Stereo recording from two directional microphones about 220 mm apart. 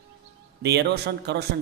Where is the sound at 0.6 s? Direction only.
50° right (ahead or behind).